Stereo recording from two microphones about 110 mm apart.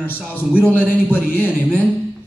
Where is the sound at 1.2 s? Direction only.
20° left (ahead or behind).